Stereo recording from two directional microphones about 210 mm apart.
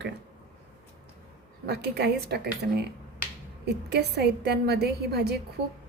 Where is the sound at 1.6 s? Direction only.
50° right (ahead or behind).